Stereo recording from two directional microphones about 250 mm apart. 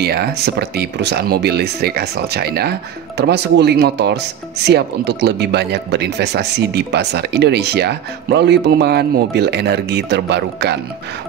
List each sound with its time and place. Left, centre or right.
0.0 s speech: right